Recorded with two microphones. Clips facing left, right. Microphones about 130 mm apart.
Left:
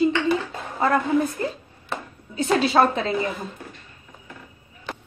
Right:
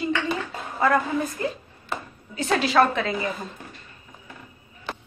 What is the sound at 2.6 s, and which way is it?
Speech, 30° left (ahead or behind).